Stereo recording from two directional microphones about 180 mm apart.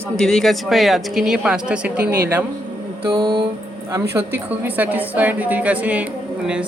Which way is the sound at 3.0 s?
30° right (ahead or behind).